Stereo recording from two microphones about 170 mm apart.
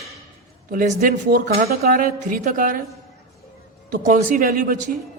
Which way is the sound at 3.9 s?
50° right (ahead or behind).